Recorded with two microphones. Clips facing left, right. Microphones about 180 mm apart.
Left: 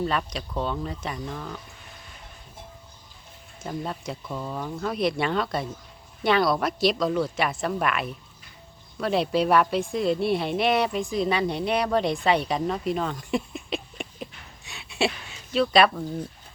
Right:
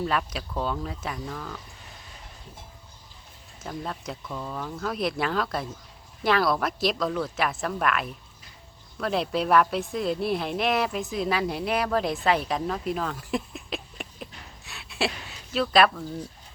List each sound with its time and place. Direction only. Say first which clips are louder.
0.0 s speech: left 1 dB; centre (ahead or behind)
3.6 s a woman's voice: left 2 dB; centre (ahead or behind)